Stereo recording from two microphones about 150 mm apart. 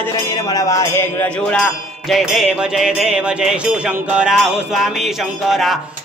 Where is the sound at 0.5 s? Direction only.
20° left (ahead or behind).